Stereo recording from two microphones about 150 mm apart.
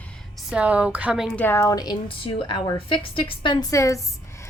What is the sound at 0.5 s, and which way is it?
Speech, 10° right (ahead or behind).